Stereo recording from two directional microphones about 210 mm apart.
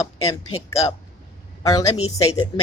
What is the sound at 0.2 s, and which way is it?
Speech, 85° left.